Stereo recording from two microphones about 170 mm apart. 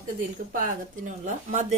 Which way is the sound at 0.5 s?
50° right (ahead or behind).